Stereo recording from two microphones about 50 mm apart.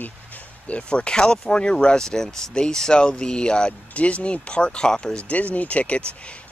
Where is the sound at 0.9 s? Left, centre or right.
Centre.